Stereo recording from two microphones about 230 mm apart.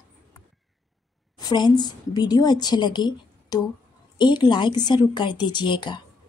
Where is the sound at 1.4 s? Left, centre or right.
Centre.